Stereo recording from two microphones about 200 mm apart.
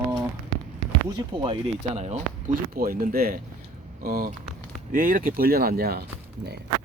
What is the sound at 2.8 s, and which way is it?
Speech, 45° right (ahead or behind).